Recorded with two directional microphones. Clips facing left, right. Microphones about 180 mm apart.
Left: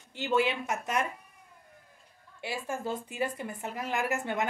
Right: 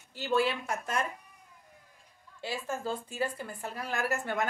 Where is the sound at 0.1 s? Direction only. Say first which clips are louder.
Left 1 dB; 20° left (ahead or behind).